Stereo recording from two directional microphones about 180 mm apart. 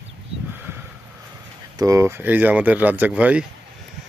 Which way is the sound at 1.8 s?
15° right (ahead or behind).